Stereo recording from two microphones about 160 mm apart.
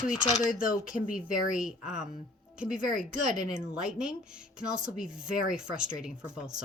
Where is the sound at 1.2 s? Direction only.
5° right (ahead or behind).